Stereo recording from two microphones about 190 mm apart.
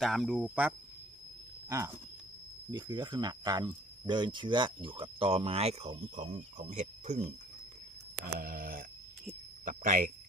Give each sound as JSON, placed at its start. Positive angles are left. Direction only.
{"t": 0.0, "sound": "speech", "side_deg": 0}
{"t": 2.7, "sound": "speech", "side_deg": -25}
{"t": 8.2, "sound": "a sound", "side_deg": -50}